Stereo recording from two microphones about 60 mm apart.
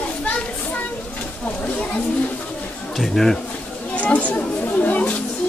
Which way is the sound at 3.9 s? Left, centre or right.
Left.